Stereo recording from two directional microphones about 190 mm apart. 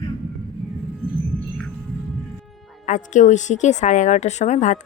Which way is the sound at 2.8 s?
40° left (ahead or behind).